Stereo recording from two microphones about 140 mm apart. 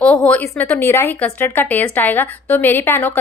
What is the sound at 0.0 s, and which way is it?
A woman's voice, 10° left (ahead or behind).